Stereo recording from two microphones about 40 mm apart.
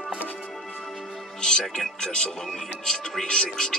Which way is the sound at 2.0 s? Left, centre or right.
Centre.